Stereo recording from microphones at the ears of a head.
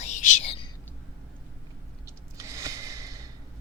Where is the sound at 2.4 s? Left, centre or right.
Right.